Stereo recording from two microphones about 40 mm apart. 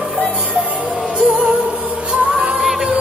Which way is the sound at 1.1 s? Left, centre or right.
Right.